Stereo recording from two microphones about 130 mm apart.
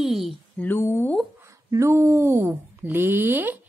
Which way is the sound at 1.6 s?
25° right (ahead or behind).